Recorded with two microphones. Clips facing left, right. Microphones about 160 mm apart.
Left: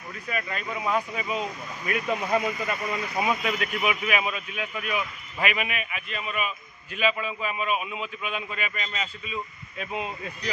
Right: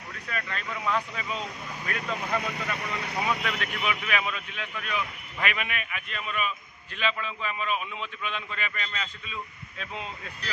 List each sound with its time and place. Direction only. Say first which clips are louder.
0.3 s a man's voice: left 3 dB; 10° left (ahead or behind)
2.5 s speech: left 3 dB; 70° right (ahead or behind)
3.8 s a man's voice: left 3 dB; 10° left (ahead or behind)